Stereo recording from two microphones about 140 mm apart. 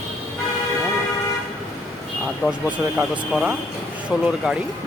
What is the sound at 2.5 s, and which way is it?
Speech, 10° right (ahead or behind).